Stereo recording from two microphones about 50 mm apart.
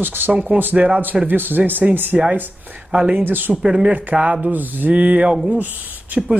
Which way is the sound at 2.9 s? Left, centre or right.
Right.